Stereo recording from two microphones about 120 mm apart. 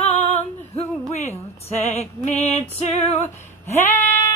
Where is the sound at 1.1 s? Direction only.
65° left (ahead or behind).